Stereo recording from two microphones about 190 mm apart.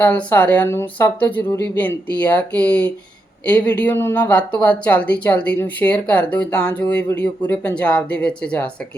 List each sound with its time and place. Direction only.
0.0 s speech: 10° left (ahead or behind)